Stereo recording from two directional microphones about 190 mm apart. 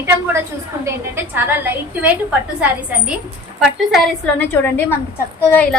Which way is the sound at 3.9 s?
10° left (ahead or behind).